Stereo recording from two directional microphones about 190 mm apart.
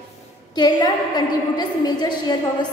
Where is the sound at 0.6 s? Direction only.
20° left (ahead or behind).